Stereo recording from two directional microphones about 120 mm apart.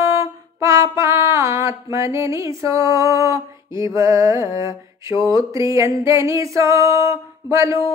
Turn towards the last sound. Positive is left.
turn(degrees=-25)  # may be behind; listen again after turning